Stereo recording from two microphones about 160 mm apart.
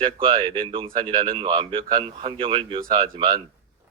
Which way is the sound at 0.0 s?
30° right (ahead or behind).